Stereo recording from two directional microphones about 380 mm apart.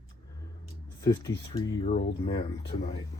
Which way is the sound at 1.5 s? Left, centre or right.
Centre.